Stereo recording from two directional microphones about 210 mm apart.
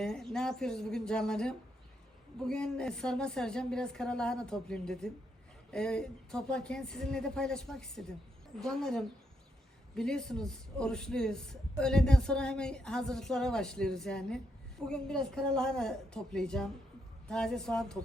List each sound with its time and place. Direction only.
0.0 s a man's voice: centre (ahead or behind)